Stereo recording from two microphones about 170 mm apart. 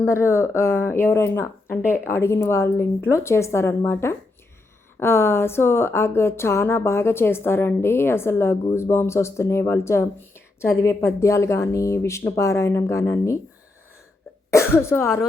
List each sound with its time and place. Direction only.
0.0 s speech: 15° left (ahead or behind)
14.5 s speech: 15° left (ahead or behind)